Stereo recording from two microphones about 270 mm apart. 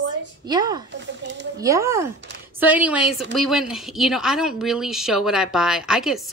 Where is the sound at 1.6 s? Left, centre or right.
Centre.